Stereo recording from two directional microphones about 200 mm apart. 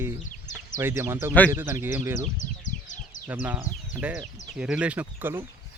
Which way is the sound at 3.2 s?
10° right (ahead or behind).